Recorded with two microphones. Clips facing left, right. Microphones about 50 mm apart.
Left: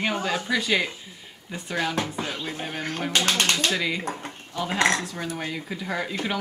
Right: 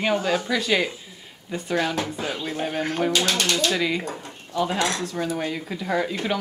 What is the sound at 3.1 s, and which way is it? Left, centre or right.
Speech, left.